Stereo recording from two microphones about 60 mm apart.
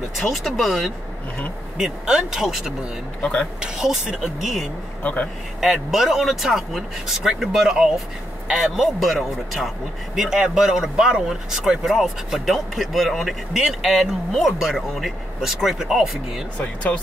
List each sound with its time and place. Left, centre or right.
0.2 s speech: centre
3.2 s speech: centre
3.6 s speech: centre
5.0 s speech: left
5.6 s speech: centre
16.5 s speech: left